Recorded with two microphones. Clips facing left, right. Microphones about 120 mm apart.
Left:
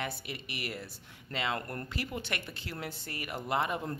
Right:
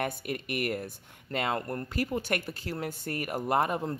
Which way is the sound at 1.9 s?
45° right (ahead or behind).